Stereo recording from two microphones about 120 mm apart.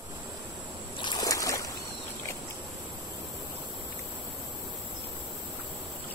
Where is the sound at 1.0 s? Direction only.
35° left (ahead or behind).